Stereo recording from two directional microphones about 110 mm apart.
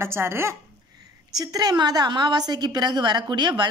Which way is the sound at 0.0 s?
20° right (ahead or behind).